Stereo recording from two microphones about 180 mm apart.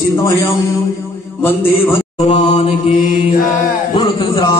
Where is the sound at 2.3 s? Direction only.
35° left (ahead or behind).